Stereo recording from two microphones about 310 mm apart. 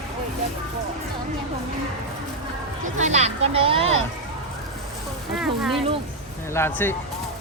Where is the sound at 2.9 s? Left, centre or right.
Right.